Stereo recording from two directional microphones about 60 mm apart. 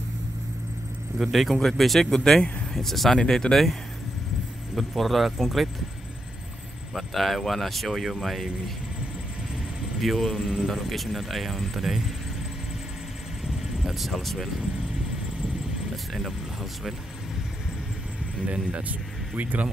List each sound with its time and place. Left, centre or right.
1.1 s speech: centre
4.7 s speech: centre
6.9 s speech: centre
9.9 s speech: centre
13.4 s vehicle: centre
16.1 s speech: centre
18.5 s speech: right